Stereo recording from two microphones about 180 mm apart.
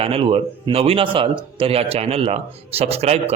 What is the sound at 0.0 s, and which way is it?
A man's voice, 30° right (ahead or behind).